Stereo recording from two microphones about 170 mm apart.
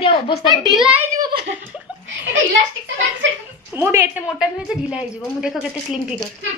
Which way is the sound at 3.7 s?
15° right (ahead or behind).